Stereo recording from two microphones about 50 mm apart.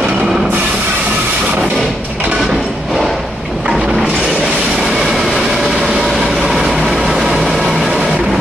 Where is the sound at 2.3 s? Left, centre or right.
Centre.